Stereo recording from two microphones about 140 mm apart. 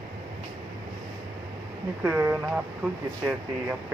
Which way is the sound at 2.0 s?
10° right (ahead or behind).